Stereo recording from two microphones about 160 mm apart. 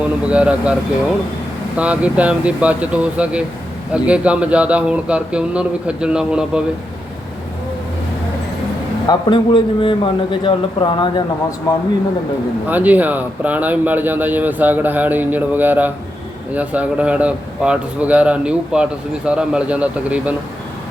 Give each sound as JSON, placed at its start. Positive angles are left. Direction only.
{"t": 0.0, "sound": "a man's voice", "side_deg": -5}
{"t": 9.0, "sound": "a man's voice", "side_deg": 30}
{"t": 12.6, "sound": "a man's voice", "side_deg": -10}